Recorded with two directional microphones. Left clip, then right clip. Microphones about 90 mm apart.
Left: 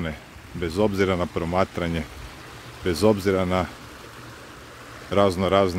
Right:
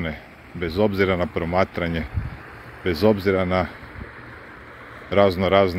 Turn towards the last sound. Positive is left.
turn(degrees=45)  # may be behind; listen again after turning